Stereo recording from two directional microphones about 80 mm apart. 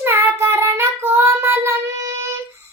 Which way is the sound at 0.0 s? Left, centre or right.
Right.